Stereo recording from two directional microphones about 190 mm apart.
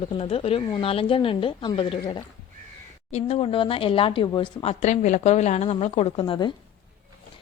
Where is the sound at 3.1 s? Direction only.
30° left (ahead or behind).